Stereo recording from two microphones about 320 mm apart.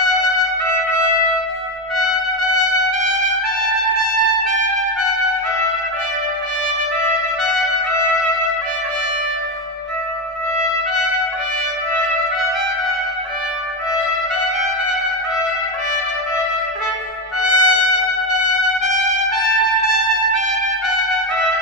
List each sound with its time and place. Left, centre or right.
0.7 s trumpet: right
7.4 s trumpet: centre
7.9 s music: right
17.5 s trumpet: right